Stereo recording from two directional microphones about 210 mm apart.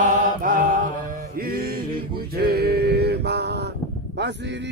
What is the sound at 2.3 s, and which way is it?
Male singing, 50° right (ahead or behind).